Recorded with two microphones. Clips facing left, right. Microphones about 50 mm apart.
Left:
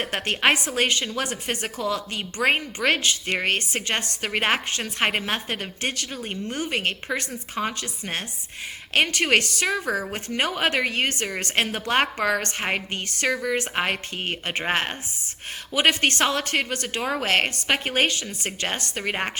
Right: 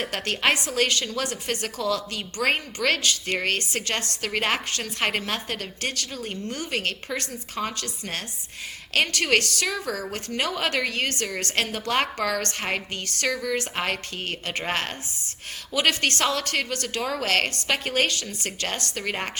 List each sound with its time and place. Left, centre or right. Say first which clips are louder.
0.0 s a woman's voice: left 2 dB; left